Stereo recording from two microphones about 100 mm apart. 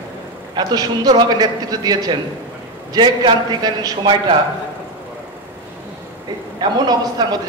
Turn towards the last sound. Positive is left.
turn(degrees=-45)  # may be behind; listen again after turning